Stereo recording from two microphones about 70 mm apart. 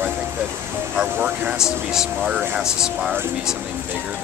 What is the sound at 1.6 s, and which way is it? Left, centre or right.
Speech, centre.